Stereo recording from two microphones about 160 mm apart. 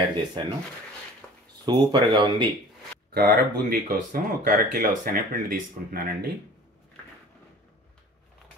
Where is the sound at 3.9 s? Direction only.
60° right (ahead or behind).